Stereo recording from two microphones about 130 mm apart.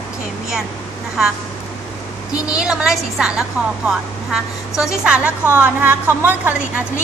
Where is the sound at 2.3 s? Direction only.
30° left (ahead or behind).